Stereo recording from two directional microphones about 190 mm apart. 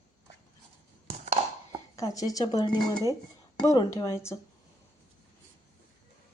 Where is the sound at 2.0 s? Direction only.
20° left (ahead or behind).